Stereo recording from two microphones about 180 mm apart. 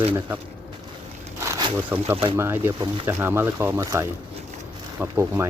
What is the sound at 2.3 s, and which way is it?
Speech, 15° right (ahead or behind).